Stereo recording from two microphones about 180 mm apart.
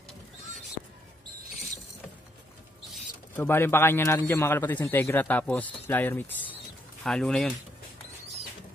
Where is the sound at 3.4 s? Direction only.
10° left (ahead or behind).